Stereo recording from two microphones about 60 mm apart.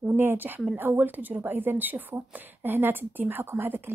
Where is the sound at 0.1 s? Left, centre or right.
Right.